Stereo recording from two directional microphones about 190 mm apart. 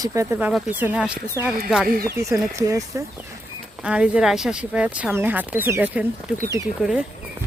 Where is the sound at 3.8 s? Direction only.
5° right (ahead or behind).